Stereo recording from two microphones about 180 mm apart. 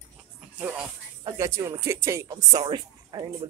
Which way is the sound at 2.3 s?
25° right (ahead or behind).